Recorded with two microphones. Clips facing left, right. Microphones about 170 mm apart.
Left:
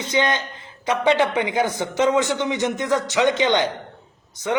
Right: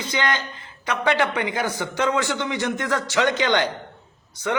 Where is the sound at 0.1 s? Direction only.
20° left (ahead or behind).